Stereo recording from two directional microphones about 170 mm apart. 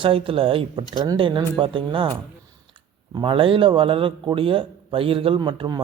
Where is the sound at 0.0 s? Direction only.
30° right (ahead or behind).